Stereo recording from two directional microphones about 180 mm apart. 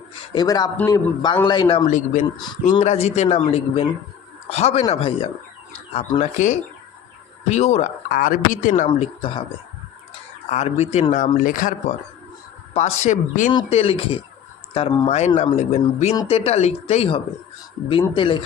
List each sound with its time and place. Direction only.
0.3 s speech: 20° left (ahead or behind)
1.9 s speech: 45° left (ahead or behind)
8.9 s speech: 30° left (ahead or behind)
10.5 s speech: 40° left (ahead or behind)
13.7 s speech: 35° left (ahead or behind)